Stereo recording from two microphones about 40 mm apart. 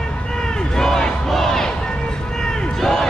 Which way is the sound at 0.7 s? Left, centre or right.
Centre.